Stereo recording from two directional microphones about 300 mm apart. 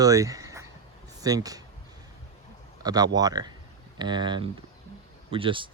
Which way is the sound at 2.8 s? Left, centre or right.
Centre.